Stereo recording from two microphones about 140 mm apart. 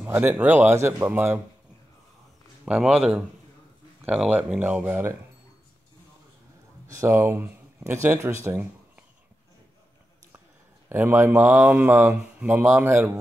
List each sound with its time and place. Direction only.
0.0 s speech: 10° right (ahead or behind)
2.6 s speech: 5° right (ahead or behind)
6.9 s speech: 20° right (ahead or behind)
10.9 s speech: 15° right (ahead or behind)